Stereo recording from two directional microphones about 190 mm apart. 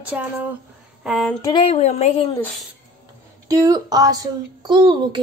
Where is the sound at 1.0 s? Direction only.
Centre (ahead or behind).